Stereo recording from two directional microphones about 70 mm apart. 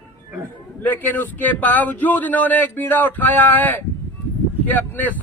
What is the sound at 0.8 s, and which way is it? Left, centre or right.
A man's voice, left.